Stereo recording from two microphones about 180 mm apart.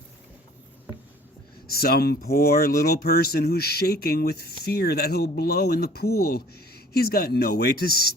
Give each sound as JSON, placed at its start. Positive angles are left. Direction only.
{"t": 1.7, "sound": "speech", "side_deg": 60}